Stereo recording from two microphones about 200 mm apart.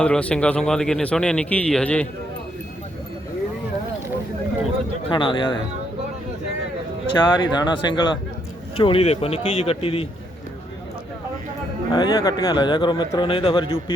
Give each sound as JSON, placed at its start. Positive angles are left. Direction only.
{"t": 0.0, "sound": "a man's voice", "side_deg": 5}
{"t": 5.0, "sound": "speech", "side_deg": 25}
{"t": 7.2, "sound": "speech", "side_deg": 20}
{"t": 11.9, "sound": "speech", "side_deg": 20}